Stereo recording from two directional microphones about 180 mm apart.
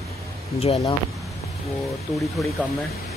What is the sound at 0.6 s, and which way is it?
Speech, 30° left (ahead or behind).